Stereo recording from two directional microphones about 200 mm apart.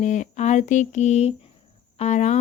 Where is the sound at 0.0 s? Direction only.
40° left (ahead or behind).